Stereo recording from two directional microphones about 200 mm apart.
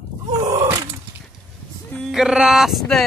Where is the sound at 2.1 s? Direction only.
Centre (ahead or behind).